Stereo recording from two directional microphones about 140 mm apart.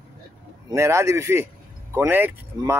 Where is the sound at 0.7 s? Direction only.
20° right (ahead or behind).